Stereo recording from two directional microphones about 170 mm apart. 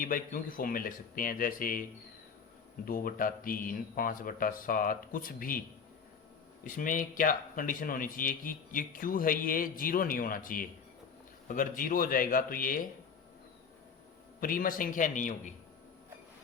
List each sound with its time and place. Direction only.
0.0 s speech: 55° left (ahead or behind)
2.8 s speech: 55° left (ahead or behind)
6.7 s speech: 50° left (ahead or behind)
14.4 s a man's voice: 55° left (ahead or behind)